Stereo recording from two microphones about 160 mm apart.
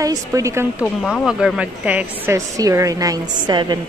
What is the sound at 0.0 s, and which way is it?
Speech, 20° right (ahead or behind).